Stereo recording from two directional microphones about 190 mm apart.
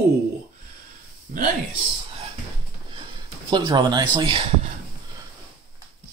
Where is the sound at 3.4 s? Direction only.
20° right (ahead or behind).